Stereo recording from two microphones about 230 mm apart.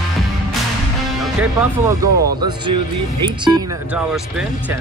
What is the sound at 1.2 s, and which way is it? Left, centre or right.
Speech, centre.